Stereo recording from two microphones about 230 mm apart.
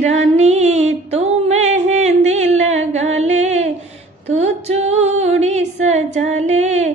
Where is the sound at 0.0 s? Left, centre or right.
Right.